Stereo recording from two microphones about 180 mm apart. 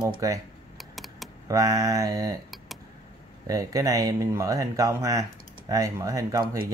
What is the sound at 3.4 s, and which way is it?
Speech, 20° right (ahead or behind).